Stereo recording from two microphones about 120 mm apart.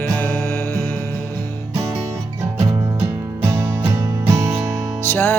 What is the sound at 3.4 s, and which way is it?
Music, 25° right (ahead or behind).